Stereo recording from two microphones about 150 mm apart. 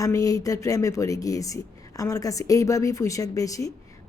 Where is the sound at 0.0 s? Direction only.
25° left (ahead or behind).